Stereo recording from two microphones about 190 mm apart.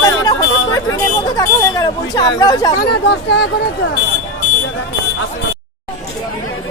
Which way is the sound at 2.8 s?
60° left (ahead or behind).